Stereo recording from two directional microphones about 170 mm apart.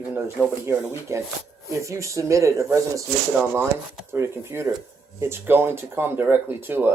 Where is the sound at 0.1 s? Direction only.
10° right (ahead or behind).